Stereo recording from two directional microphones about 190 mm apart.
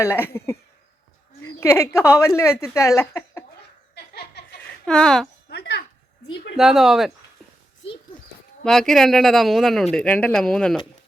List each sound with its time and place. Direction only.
0.0 s speech: 10° left (ahead or behind)
1.4 s a sound: 15° left (ahead or behind)
2.0 s speech: 15° left (ahead or behind)
3.9 s laughter: 60° left (ahead or behind)
4.9 s speech: 5° left (ahead or behind)
5.5 s a sound: 60° left (ahead or behind)
6.6 s speech: centre (ahead or behind)
8.6 s speech: 5° left (ahead or behind)